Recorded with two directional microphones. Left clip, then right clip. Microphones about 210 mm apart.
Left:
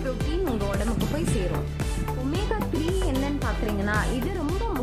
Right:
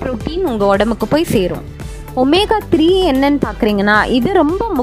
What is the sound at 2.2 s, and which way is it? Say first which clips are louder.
A woman's voice: right 19 dB; 55° right (ahead or behind).